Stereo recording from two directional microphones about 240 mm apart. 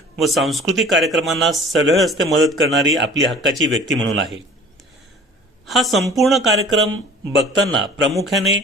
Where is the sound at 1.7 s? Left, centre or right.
Right.